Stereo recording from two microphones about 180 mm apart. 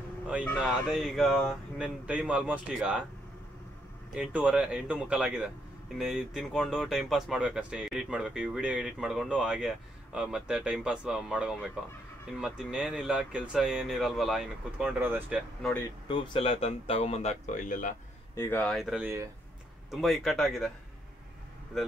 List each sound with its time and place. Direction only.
0.8 s speech: 5° right (ahead or behind)
4.1 s speech: 5° right (ahead or behind)
16.1 s a man's voice: 30° left (ahead or behind); by 17.9 s 45° left (ahead or behind)
18.3 s speech: 15° left (ahead or behind)
21.7 s speech: centre (ahead or behind)